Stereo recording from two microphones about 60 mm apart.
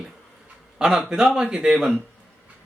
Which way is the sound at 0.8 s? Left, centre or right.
Centre.